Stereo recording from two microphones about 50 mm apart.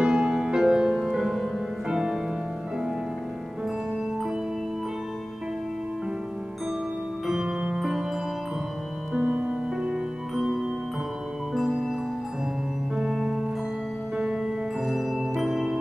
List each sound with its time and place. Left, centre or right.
0.0 s music: centre
7.2 s music: centre
9.1 s music: right
10.3 s music: centre
11.6 s music: centre
12.9 s music: centre